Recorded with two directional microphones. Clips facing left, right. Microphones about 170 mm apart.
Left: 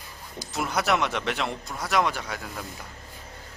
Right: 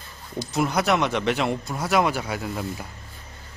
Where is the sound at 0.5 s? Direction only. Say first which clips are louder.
Right 3 dB; centre (ahead or behind).